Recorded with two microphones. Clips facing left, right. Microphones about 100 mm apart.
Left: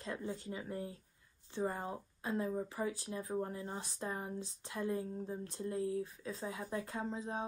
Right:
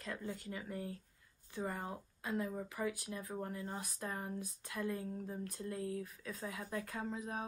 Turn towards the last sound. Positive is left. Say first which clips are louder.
# left 2 dB
turn(degrees=30)  # may be behind; listen again after turning